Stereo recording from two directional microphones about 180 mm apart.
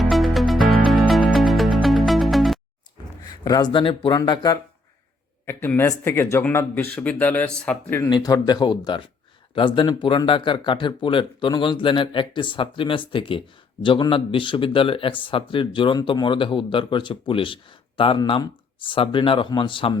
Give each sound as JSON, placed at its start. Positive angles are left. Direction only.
{"t": 0.0, "sound": "music", "side_deg": 0}
{"t": 3.4, "sound": "speech", "side_deg": 20}
{"t": 5.5, "sound": "speech", "side_deg": 10}
{"t": 8.1, "sound": "speech", "side_deg": 20}